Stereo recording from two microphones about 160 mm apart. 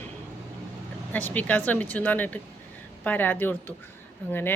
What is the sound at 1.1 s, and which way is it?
Speech, 10° left (ahead or behind).